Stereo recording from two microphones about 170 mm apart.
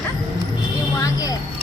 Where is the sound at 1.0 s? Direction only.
20° left (ahead or behind).